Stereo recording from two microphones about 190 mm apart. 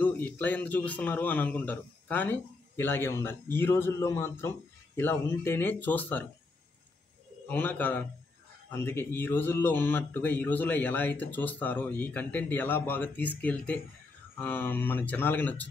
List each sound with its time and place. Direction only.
0.0 s speech: 10° left (ahead or behind)
7.4 s speech: 10° left (ahead or behind)